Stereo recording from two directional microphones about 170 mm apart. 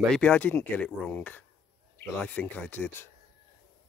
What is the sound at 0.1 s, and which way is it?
Speech, 10° left (ahead or behind).